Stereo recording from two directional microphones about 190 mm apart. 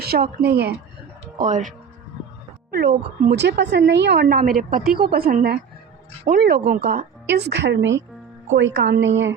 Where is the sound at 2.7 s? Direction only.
55° right (ahead or behind); by 9.4 s 75° right (ahead or behind).